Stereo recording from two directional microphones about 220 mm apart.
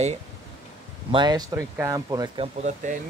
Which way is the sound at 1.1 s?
20° right (ahead or behind).